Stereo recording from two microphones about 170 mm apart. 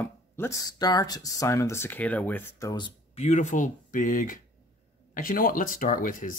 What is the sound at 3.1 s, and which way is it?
Speech, 40° left (ahead or behind).